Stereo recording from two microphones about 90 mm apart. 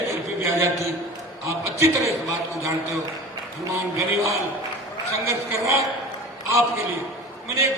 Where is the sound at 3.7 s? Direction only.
30° right (ahead or behind).